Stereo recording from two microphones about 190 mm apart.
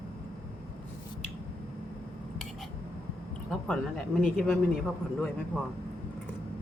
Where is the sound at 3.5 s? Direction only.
Centre (ahead or behind).